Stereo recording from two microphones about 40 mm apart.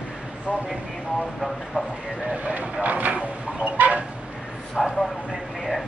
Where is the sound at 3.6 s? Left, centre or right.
Right.